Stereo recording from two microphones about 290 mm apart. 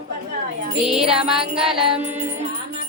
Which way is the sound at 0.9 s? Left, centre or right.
Centre.